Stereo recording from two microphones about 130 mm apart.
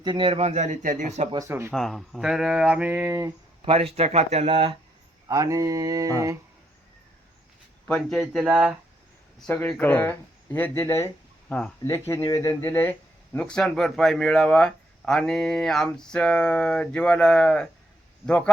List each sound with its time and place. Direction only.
0.0 s speech: 35° right (ahead or behind); by 1.3 s 65° right (ahead or behind)
1.3 s mantra: 25° right (ahead or behind)
1.7 s speech: centre (ahead or behind); by 3.3 s 20° right (ahead or behind)
3.6 s speech: 45° right (ahead or behind)
5.3 s mantra: 25° right (ahead or behind)
7.9 s speech: 5° left (ahead or behind)
9.5 s speech: 10° left (ahead or behind)
13.3 s speech: 5° left (ahead or behind)